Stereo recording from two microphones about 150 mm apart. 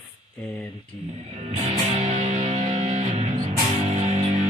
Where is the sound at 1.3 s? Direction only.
45° right (ahead or behind).